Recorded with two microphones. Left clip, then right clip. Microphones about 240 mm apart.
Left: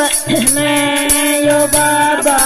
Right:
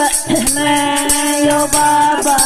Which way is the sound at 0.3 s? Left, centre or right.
Centre.